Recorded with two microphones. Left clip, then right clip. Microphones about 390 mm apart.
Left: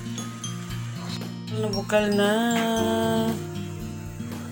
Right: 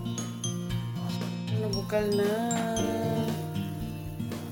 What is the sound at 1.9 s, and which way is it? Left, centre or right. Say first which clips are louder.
Music: left 6 dB; right.